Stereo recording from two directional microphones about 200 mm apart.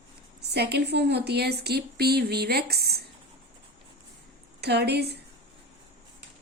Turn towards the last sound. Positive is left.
turn(degrees=-55)  # may be behind; listen again after turning